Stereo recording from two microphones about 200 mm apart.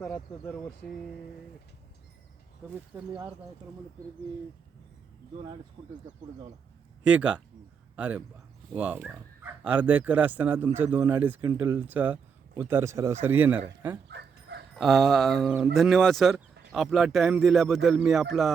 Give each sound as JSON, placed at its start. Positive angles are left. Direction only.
{"t": 0.0, "sound": "speech", "side_deg": 10}
{"t": 2.9, "sound": "speech", "side_deg": -10}
{"t": 5.8, "sound": "speech", "side_deg": -40}
{"t": 7.0, "sound": "speech", "side_deg": -5}
{"t": 14.1, "sound": "dog", "side_deg": -55}
{"t": 14.8, "sound": "speech", "side_deg": 0}